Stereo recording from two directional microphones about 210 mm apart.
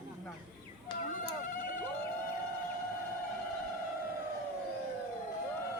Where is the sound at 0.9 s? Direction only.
20° left (ahead or behind).